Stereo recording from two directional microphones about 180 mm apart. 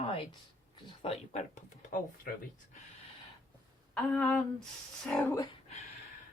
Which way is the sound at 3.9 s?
Centre (ahead or behind).